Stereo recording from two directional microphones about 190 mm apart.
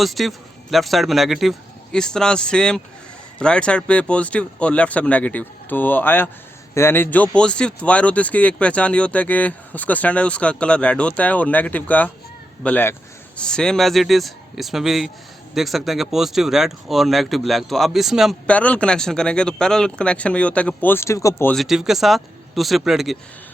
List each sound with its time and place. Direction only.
0.0 s speech: centre (ahead or behind)
21.5 s speech: centre (ahead or behind)